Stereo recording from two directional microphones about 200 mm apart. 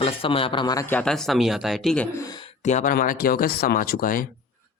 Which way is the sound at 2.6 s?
35° left (ahead or behind).